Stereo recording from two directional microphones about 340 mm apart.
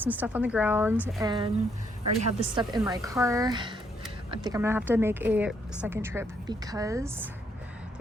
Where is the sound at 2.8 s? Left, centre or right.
Centre.